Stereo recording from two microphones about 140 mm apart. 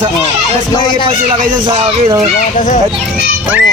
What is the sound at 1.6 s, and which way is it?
Speech, 35° right (ahead or behind).